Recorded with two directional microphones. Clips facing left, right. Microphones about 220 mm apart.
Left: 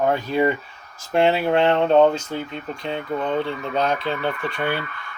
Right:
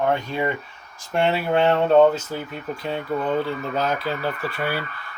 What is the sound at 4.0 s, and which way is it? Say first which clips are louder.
Speech: left 1 dB; 25° left (ahead or behind).